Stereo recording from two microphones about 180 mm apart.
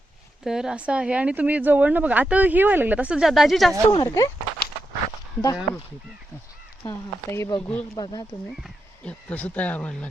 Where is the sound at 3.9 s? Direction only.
20° left (ahead or behind).